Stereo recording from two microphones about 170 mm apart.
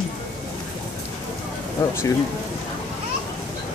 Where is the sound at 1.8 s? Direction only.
15° left (ahead or behind).